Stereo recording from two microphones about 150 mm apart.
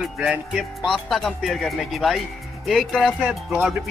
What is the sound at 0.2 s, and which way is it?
Speech, centre (ahead or behind).